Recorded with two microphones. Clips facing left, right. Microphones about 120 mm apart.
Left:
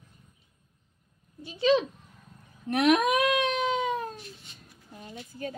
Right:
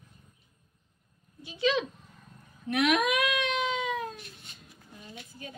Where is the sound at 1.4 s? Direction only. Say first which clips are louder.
Left 4 dB; 35° left (ahead or behind).